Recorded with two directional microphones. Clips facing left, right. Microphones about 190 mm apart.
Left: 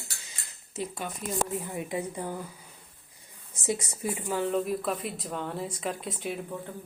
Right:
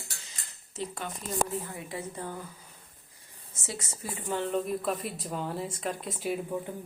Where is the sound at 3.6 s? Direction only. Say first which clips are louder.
Left 9 dB; 15° left (ahead or behind).